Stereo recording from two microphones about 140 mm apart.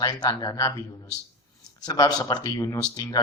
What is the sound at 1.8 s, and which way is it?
Speech, 30° left (ahead or behind).